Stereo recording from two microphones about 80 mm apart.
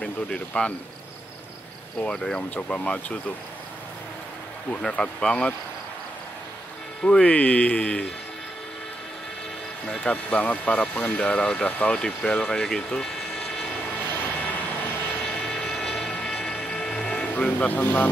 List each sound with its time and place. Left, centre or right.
0.0 s speech: centre
2.0 s speech: centre
4.8 s speech: centre
7.0 s speech: centre
9.8 s speech: centre
13.8 s vehicle: left
15.2 s vehicle: centre
16.1 s a sound: centre
16.6 s music: centre
17.4 s speech: centre